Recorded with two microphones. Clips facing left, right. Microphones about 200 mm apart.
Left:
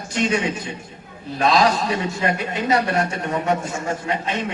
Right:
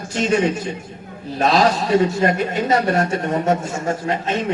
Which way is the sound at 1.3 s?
40° right (ahead or behind).